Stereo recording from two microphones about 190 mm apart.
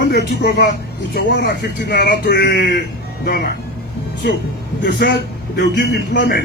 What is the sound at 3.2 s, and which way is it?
Speech, 55° left (ahead or behind).